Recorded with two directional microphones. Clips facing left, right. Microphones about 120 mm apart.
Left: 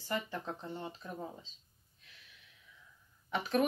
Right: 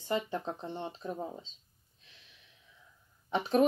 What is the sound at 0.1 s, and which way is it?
Speech, 25° right (ahead or behind).